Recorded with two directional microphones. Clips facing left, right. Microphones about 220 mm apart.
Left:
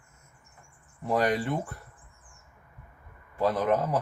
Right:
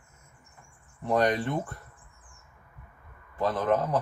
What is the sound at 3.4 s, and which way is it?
Speech, 10° left (ahead or behind).